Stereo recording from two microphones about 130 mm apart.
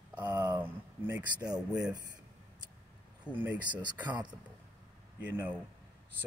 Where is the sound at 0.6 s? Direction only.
15° right (ahead or behind).